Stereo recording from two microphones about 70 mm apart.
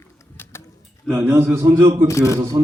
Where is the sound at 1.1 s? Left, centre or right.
Right.